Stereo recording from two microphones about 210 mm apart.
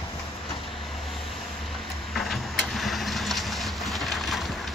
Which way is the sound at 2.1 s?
Centre (ahead or behind).